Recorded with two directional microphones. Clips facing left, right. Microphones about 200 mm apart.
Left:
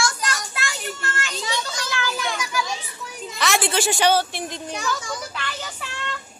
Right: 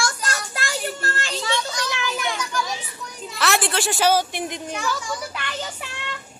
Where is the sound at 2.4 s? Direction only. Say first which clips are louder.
Even; 5° left (ahead or behind); by 4.6 s 15° right (ahead or behind).